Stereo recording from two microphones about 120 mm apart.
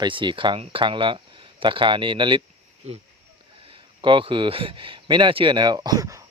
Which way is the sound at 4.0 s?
45° right (ahead or behind).